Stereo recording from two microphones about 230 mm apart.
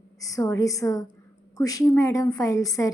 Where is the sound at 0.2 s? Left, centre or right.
Centre.